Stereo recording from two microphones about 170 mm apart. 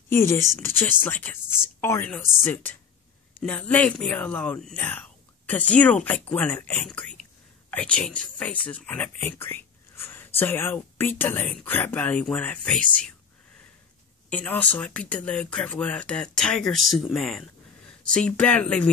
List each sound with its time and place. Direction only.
0.1 s speech: 15° left (ahead or behind)
1.4 s speech: 5° right (ahead or behind)
1.8 s speech: 15° left (ahead or behind)
14.3 s speech: 10° left (ahead or behind)